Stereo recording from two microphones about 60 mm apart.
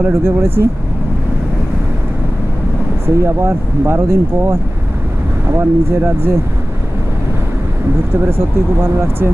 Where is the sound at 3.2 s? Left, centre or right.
Right.